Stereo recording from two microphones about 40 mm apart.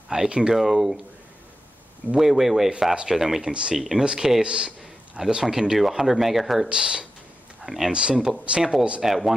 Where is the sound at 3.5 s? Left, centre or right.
Right.